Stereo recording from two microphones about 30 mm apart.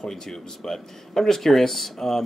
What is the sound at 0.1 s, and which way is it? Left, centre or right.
Speech, centre.